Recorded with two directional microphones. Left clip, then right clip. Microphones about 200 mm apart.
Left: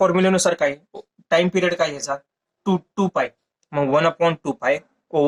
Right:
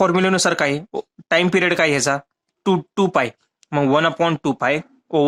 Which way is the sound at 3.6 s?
35° right (ahead or behind).